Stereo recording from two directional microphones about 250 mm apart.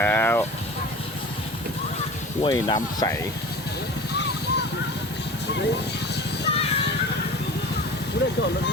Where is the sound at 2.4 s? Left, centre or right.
Centre.